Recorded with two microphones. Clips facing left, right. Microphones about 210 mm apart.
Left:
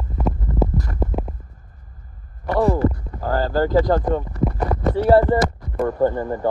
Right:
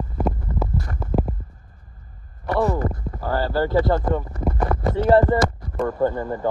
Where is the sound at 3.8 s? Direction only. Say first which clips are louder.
Left 2 dB; 15° left (ahead or behind).